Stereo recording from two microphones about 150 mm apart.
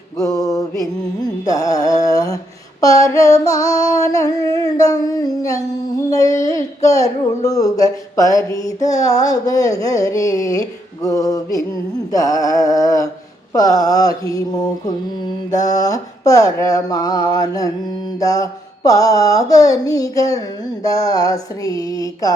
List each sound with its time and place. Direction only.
0.8 s carnatic music: 25° left (ahead or behind)
2.8 s a sound: 25° left (ahead or behind)
13.5 s mantra: 25° left (ahead or behind)